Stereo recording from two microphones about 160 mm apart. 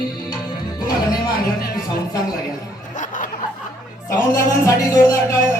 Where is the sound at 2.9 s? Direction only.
55° left (ahead or behind).